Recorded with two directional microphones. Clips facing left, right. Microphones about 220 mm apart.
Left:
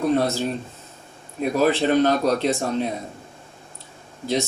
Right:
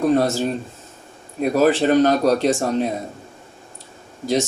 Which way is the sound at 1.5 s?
45° right (ahead or behind).